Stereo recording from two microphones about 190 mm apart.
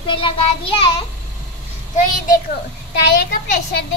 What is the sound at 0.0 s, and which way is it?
A child's voice, 25° left (ahead or behind).